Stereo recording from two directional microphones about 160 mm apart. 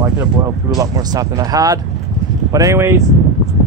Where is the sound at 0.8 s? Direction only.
20° right (ahead or behind).